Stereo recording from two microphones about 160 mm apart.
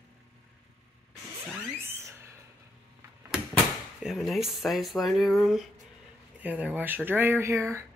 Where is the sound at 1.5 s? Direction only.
10° right (ahead or behind).